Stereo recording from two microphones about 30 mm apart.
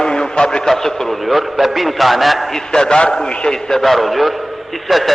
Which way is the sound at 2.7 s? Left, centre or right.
Left.